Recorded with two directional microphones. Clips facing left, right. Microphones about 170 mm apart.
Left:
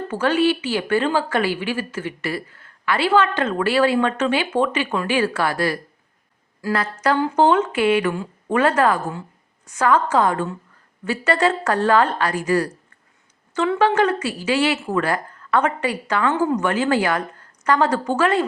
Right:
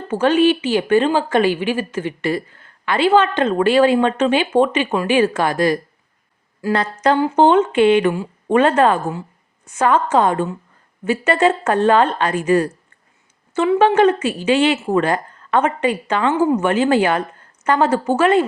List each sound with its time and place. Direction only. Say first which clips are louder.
0.1 s a woman's voice: right 5 dB; 20° right (ahead or behind)
7.2 s a woman's voice: right 3 dB; 25° right (ahead or behind)
8.1 s speech: right 4 dB; 15° right (ahead or behind)
8.5 s a woman's voice: right 4 dB; 30° right (ahead or behind)
16.3 s a woman's voice: right 5 dB; 10° right (ahead or behind)
16.6 s a woman's voice: right 4 dB; 25° right (ahead or behind)